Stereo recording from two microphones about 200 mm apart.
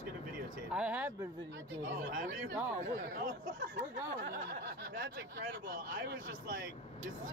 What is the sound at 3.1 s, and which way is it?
Speech, 45° right (ahead or behind).